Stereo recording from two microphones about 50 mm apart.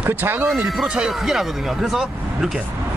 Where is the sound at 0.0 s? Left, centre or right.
Right.